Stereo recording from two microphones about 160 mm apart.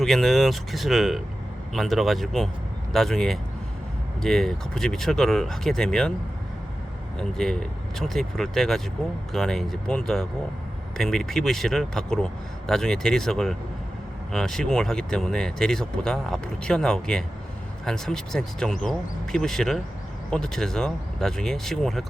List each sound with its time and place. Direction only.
0.0 s speech: centre (ahead or behind)
7.2 s speech: 5° left (ahead or behind)